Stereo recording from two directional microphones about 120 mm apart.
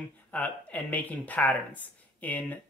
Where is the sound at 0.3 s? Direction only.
10° left (ahead or behind).